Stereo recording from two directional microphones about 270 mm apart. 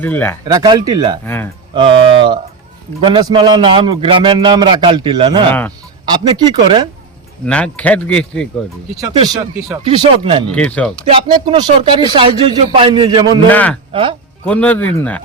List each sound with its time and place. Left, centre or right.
0.0 s speech: centre
0.4 s a man's voice: centre
1.2 s speech: centre
1.7 s a man's voice: centre
5.5 s speech: centre
6.1 s a man's voice: centre
7.4 s speech: centre
9.0 s a man's voice: centre
10.5 s speech: centre
11.1 s a man's voice: centre
13.5 s speech: centre
13.9 s speech: centre
14.4 s speech: centre